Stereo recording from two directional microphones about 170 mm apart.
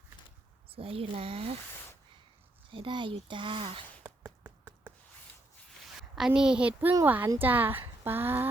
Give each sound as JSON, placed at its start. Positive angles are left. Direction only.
{"t": 0.7, "sound": "speech", "side_deg": -35}
{"t": 2.7, "sound": "speech", "side_deg": -30}
{"t": 4.0, "sound": "a sound", "side_deg": -10}
{"t": 6.0, "sound": "a woman's voice", "side_deg": -5}